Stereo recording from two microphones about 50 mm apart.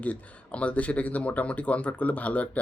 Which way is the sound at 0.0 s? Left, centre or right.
Left.